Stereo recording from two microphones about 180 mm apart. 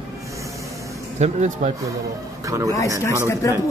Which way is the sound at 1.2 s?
40° right (ahead or behind).